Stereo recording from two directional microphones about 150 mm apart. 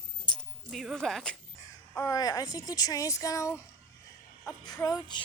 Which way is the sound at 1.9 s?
20° left (ahead or behind).